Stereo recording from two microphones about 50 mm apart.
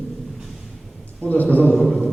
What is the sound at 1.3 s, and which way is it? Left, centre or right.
Speech, left.